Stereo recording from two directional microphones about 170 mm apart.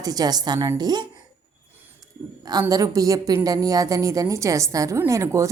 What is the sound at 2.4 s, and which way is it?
A woman's voice, 25° right (ahead or behind).